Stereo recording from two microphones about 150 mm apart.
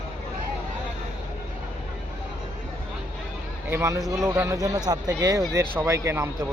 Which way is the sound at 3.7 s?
20° right (ahead or behind).